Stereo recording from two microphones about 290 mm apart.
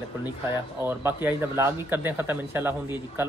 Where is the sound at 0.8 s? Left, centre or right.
Centre.